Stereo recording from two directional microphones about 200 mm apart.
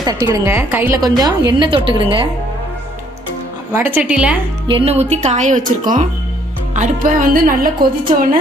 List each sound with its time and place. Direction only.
0.0 s a woman's voice: 20° right (ahead or behind)
3.7 s a woman's voice: 10° right (ahead or behind)
4.6 s speech: 30° right (ahead or behind); by 7.7 s 45° right (ahead or behind)